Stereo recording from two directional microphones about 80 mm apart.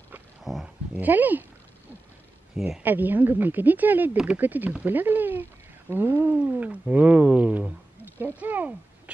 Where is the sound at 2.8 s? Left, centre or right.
Right.